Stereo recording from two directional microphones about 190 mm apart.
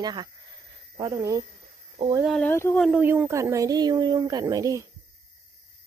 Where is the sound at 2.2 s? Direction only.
Centre (ahead or behind).